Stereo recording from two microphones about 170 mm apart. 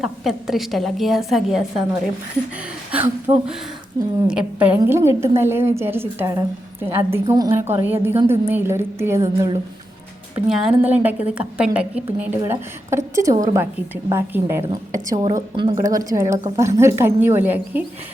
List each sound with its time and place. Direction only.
0.0 s a woman's voice: centre (ahead or behind)
4.3 s a woman's voice: 5° right (ahead or behind)
10.3 s a woman's voice: 5° right (ahead or behind)